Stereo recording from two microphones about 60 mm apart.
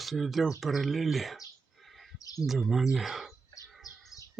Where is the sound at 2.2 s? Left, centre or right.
Left.